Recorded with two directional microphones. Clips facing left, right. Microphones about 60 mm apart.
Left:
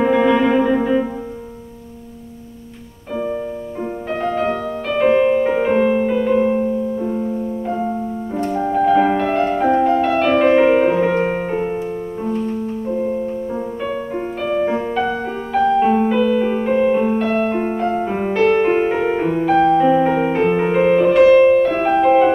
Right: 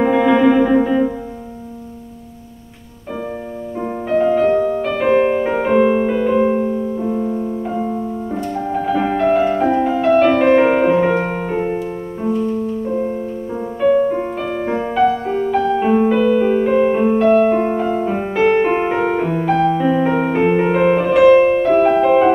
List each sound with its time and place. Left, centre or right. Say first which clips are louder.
0.0 s music: right 2 dB; centre
4.8 s music: left 1 dB; centre
5.1 s music: right 1 dB; right
5.4 s music: right 1 dB; centre
11.2 s music: even; centre
12.9 s music: even; centre